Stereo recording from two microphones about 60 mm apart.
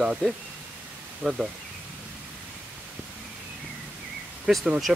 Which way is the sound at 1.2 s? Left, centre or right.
Centre.